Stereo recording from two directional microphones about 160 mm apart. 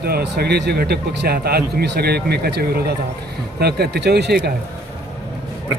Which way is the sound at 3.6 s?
90° right.